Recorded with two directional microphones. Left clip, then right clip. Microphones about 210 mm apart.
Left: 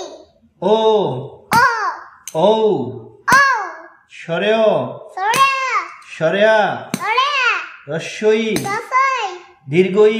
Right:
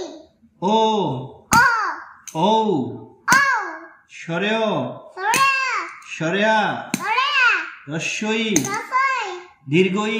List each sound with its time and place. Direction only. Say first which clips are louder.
0.6 s speech: left 4 dB; 50° left (ahead or behind)
1.6 s hands: left 2 dB; 30° left (ahead or behind)
2.3 s speech: left 4 dB; 50° left (ahead or behind)
3.3 s a sound: left 4 dB; 35° left (ahead or behind)
4.2 s babbling: left 6 dB; 55° left (ahead or behind)
7.0 s babbling: left 2 dB; 40° left (ahead or behind)
8.9 s a sound: left 4 dB; 40° left (ahead or behind)